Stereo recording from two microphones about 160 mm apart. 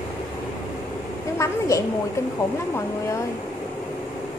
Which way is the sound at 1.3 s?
20° left (ahead or behind).